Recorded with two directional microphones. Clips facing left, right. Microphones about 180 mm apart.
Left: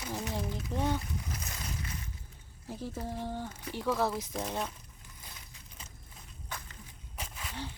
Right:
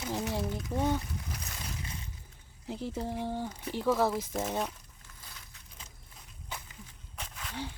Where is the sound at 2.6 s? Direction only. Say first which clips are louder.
Right 3 dB; 20° right (ahead or behind).